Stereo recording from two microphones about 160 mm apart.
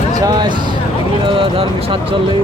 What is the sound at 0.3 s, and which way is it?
Speech, 25° right (ahead or behind).